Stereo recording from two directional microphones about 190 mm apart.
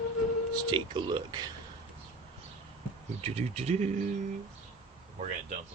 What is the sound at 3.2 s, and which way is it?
Speech, 30° right (ahead or behind).